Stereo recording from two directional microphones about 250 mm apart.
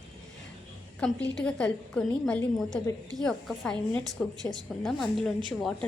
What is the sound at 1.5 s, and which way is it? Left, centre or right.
A woman's voice, centre.